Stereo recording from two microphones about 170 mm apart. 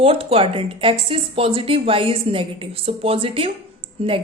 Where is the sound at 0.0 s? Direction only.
35° right (ahead or behind).